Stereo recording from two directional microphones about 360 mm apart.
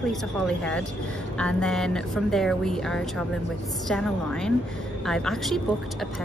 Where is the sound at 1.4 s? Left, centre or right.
Centre.